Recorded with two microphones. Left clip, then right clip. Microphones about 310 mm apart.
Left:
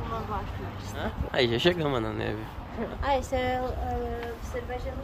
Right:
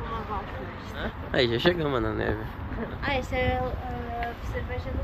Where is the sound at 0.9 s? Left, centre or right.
Centre.